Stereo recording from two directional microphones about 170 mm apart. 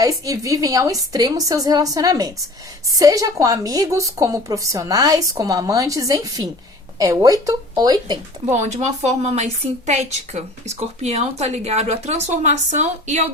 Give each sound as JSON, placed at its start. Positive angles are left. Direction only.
{"t": 0.0, "sound": "a woman's voice", "side_deg": -20}
{"t": 8.4, "sound": "a woman's voice", "side_deg": -45}